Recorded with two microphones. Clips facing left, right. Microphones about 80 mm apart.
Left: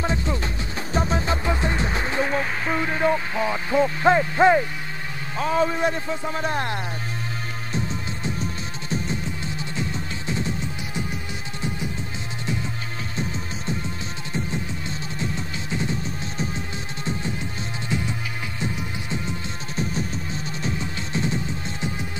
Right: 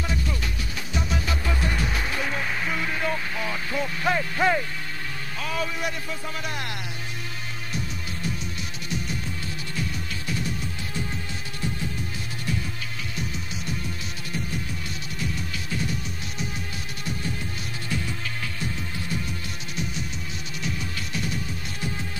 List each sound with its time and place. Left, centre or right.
0.0 s music: left
2.7 s a sound: left
5.4 s a man's voice: left
7.7 s music: left
13.1 s music: left